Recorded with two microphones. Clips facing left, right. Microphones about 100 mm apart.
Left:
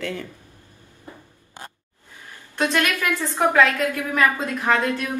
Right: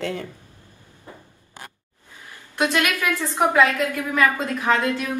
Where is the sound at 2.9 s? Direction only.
20° left (ahead or behind).